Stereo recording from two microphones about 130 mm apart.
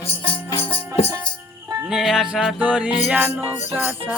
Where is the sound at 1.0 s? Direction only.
50° left (ahead or behind).